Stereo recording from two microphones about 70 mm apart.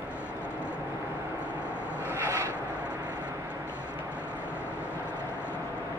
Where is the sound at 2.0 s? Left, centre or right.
Right.